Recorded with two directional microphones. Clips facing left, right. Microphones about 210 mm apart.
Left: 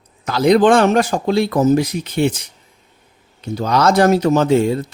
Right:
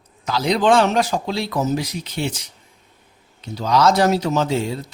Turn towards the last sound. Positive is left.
turn(degrees=55)  # may be behind; listen again after turning